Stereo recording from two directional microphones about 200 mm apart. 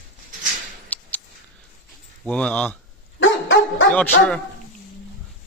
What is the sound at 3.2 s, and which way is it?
Dog, 75° left (ahead or behind).